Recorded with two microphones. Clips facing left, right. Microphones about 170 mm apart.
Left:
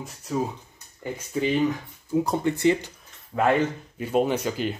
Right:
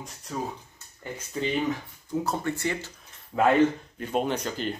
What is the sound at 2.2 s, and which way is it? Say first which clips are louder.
Speech: left 7 dB; 20° left (ahead or behind).